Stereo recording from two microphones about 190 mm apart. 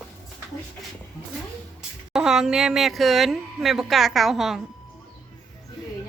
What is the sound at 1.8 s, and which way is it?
Speech, 5° right (ahead or behind).